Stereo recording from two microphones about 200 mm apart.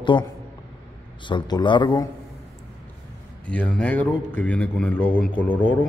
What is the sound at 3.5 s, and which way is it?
A man's voice, 5° left (ahead or behind).